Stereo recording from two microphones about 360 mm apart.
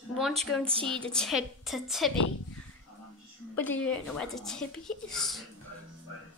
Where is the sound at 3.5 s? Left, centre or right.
Centre.